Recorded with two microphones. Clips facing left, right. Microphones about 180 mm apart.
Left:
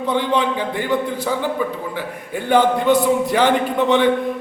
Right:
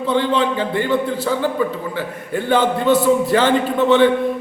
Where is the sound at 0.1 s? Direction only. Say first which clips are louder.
Right 2 dB; 15° left (ahead or behind).